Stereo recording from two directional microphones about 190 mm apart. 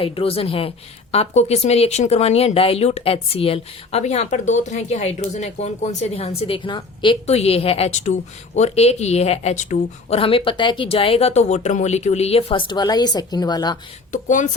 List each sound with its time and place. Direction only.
0.0 s a woman's voice: 30° left (ahead or behind)
14.1 s speech: 40° left (ahead or behind)